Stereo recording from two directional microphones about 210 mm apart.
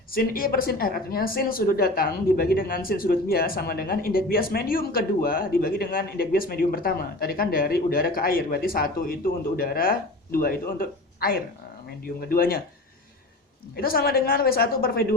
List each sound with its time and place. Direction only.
0.1 s a woman's voice: 45° left (ahead or behind)
13.7 s a woman's voice: 45° left (ahead or behind)